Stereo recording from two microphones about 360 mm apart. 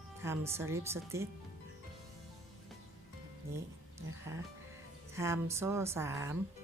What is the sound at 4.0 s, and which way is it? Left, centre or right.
Speech, centre.